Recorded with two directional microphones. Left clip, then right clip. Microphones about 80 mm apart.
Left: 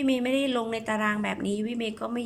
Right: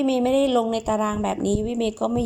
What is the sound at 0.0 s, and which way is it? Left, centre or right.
A woman's voice, right.